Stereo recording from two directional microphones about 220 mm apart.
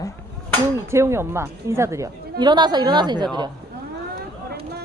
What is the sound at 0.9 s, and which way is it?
A woman's voice, 10° right (ahead or behind).